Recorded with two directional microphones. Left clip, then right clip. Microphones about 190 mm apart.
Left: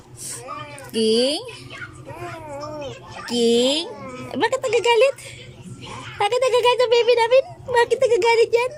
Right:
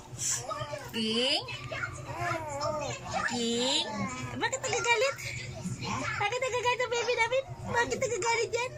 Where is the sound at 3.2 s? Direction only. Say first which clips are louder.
Left 14 dB; 50° left (ahead or behind).